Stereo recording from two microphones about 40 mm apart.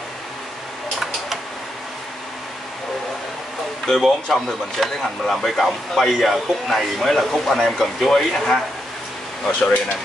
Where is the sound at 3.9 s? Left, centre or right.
Centre.